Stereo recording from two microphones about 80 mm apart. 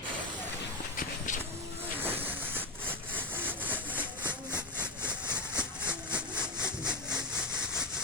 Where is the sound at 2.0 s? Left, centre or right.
Right.